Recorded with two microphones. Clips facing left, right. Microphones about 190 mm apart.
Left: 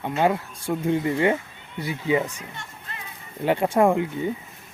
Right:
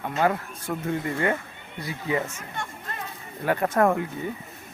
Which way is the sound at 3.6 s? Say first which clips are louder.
Left 2 dB; 15° left (ahead or behind).